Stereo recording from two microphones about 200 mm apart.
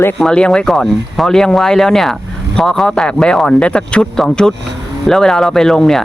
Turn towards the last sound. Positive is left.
turn(degrees=0)  # may be behind; listen again after turning